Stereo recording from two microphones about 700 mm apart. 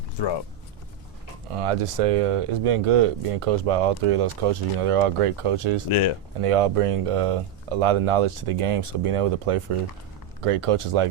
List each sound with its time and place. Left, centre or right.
0.2 s speech: left
1.5 s speech: right